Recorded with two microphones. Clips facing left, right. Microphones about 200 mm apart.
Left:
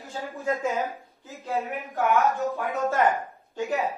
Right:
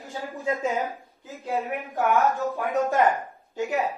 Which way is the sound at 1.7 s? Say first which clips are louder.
Even; centre (ahead or behind).